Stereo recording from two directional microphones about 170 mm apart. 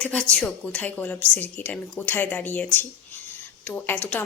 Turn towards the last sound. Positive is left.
turn(degrees=10)  # may be behind; listen again after turning